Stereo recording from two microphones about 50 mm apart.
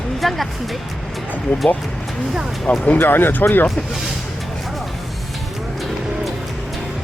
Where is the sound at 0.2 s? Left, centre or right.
Centre.